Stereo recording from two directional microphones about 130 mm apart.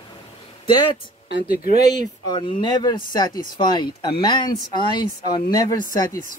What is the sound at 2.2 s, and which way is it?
Speech, 35° left (ahead or behind).